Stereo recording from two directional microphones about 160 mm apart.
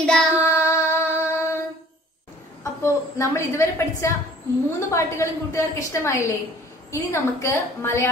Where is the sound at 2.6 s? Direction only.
20° left (ahead or behind).